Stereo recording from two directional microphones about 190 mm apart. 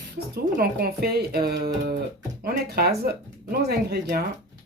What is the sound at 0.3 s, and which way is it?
Speech, 55° right (ahead or behind).